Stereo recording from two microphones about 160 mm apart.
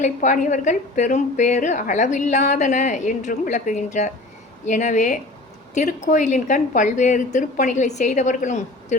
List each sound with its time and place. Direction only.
0.0 s a woman's voice: 50° left (ahead or behind)